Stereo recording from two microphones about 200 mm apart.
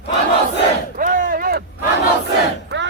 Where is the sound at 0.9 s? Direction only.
45° right (ahead or behind).